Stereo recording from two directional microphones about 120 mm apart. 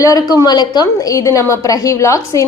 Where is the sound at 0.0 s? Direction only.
30° left (ahead or behind).